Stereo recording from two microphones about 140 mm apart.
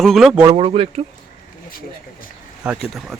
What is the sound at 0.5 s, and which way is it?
Speech, 45° right (ahead or behind).